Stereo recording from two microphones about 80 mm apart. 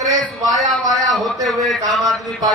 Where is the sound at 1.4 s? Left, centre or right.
Centre.